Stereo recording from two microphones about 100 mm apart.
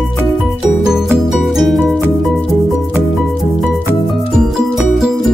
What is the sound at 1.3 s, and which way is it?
Music, centre (ahead or behind).